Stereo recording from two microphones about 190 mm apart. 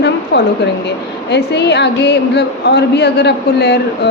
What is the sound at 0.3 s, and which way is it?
A woman's voice, 60° left (ahead or behind).